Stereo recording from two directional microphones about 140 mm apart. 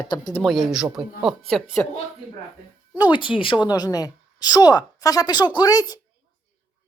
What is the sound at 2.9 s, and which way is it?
Speech, 30° left (ahead or behind).